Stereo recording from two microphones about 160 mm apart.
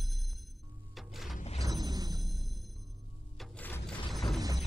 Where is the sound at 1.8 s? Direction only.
25° right (ahead or behind).